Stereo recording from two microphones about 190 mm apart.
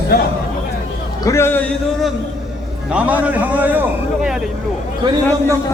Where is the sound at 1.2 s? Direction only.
15° left (ahead or behind).